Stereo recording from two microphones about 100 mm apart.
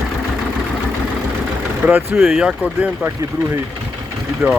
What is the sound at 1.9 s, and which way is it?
Speech, 20° right (ahead or behind).